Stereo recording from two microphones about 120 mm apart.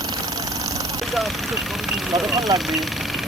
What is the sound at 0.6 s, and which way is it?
Vehicle, 30° right (ahead or behind).